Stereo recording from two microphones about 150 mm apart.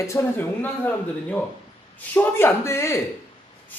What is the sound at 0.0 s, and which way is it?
Speech, 20° left (ahead or behind).